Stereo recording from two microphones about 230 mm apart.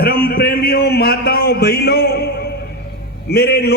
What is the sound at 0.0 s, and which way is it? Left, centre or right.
A man's voice, left.